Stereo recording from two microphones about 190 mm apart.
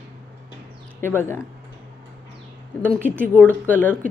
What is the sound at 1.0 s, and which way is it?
Speech, 10° left (ahead or behind).